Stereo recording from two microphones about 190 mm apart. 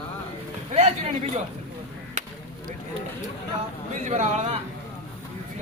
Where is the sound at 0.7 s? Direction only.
35° right (ahead or behind).